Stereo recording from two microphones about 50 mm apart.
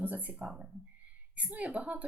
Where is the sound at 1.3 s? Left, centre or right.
Right.